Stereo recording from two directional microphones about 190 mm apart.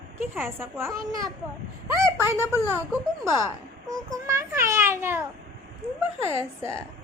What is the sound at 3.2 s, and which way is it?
A woman's voice, 15° right (ahead or behind).